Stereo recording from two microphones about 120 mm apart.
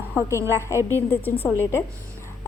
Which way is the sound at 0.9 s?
15° left (ahead or behind).